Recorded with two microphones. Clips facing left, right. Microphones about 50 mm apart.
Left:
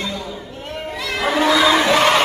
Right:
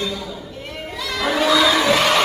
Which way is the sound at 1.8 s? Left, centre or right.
Left.